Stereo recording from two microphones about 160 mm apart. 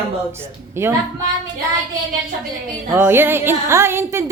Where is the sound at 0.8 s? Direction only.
15° right (ahead or behind).